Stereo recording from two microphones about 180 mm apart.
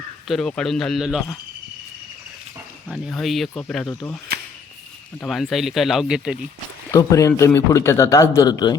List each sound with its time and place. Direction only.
0.3 s speech: 5° left (ahead or behind)
2.9 s speech: centre (ahead or behind)
5.2 s speech: centre (ahead or behind)
6.9 s speech: 20° left (ahead or behind)